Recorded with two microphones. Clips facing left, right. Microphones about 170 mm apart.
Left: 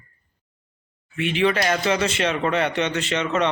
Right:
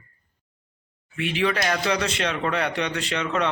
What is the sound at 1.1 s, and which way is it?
Speech, centre (ahead or behind).